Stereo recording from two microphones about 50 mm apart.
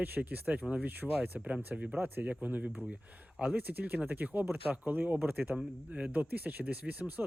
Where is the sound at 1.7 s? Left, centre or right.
Right.